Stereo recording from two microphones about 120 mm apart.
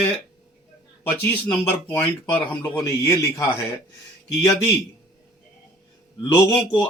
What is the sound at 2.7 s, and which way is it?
Speech, 25° left (ahead or behind).